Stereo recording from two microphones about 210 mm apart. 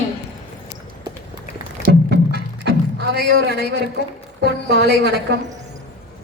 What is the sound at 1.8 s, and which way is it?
Music, 50° right (ahead or behind).